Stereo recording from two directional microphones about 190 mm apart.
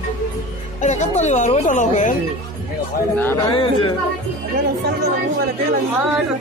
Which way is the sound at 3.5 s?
25° left (ahead or behind).